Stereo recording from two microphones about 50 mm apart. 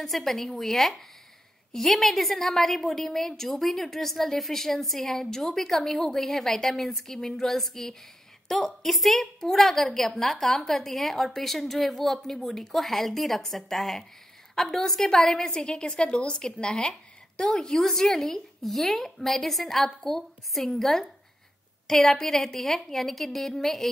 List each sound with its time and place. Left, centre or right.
0.0 s a woman's voice: centre